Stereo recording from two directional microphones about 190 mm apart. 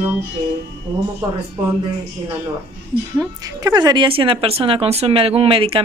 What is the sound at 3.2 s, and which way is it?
A woman's voice, 20° right (ahead or behind).